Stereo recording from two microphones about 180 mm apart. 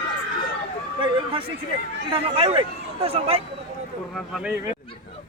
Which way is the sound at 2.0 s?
30° right (ahead or behind).